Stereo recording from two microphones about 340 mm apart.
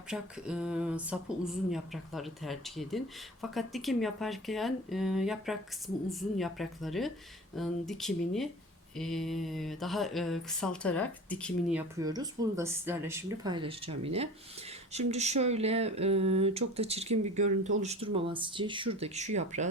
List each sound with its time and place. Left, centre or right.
0.1 s speech: centre; by 19.6 s right